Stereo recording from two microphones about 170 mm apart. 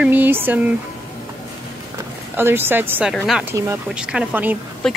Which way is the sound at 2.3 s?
15° right (ahead or behind).